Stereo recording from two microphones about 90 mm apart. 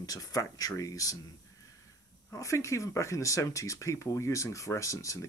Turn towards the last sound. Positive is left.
turn(degrees=35)  # may be behind; listen again after turning